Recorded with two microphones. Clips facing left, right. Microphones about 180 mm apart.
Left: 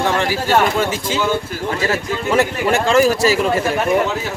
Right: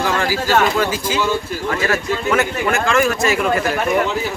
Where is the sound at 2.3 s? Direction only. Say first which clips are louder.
Left 5 dB; 35° left (ahead or behind).